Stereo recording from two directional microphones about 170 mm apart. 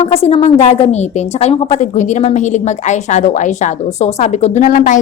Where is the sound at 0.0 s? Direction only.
35° left (ahead or behind).